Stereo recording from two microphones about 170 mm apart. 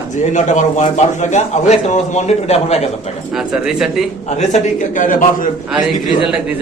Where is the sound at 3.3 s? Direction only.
Centre (ahead or behind).